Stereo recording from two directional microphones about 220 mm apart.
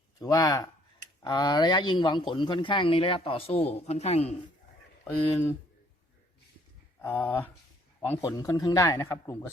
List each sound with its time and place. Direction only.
0.2 s a man's voice: 15° left (ahead or behind)
5.0 s a man's voice: 10° left (ahead or behind)
7.0 s a man's voice: 10° left (ahead or behind)